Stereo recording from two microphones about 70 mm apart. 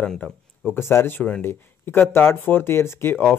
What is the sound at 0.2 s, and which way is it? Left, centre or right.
Speech, left.